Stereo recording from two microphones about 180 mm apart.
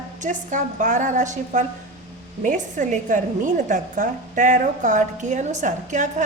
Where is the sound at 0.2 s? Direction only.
45° right (ahead or behind).